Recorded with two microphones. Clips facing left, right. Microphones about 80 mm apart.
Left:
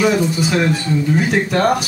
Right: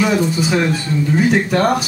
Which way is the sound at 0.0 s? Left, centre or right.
Centre.